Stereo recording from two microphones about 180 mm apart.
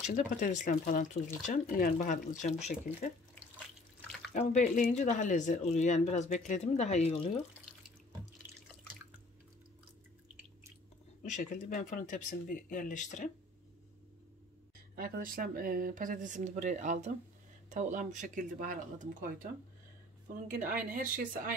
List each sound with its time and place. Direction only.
0.0 s speech: 45° left (ahead or behind)
4.3 s speech: 40° left (ahead or behind)
8.4 s water: 10° right (ahead or behind)
11.2 s speech: 45° left (ahead or behind)
15.0 s speech: 50° right (ahead or behind)
20.9 s speech: 50° right (ahead or behind)